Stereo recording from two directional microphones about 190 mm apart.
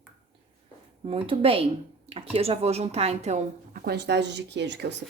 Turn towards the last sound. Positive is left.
turn(degrees=-65)  # may be behind; listen again after turning